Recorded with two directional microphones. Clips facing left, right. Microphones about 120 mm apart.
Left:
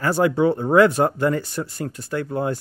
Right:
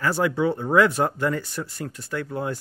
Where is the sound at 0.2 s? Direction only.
45° left (ahead or behind).